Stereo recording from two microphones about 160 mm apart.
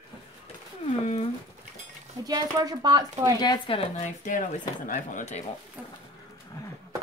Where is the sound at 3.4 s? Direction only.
30° left (ahead or behind).